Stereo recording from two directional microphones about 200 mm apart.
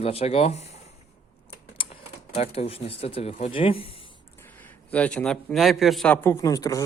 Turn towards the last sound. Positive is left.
turn(degrees=15)  # may be behind; listen again after turning